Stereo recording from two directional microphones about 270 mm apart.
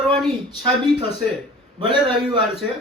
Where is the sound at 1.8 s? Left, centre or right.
Centre.